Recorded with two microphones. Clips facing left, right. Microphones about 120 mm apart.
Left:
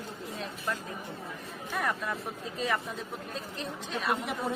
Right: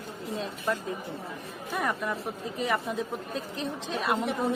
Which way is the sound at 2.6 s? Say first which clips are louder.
Right 3 dB; 15° right (ahead or behind).